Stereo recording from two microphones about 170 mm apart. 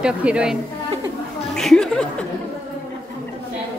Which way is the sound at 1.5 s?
5° left (ahead or behind).